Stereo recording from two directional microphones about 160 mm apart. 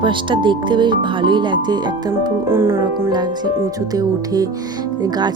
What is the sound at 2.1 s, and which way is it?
Speech, 15° right (ahead or behind).